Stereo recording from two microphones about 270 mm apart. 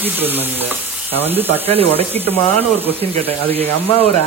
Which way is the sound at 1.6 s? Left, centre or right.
Right.